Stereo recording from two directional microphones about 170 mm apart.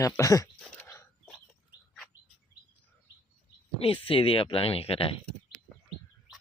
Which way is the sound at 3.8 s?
35° left (ahead or behind).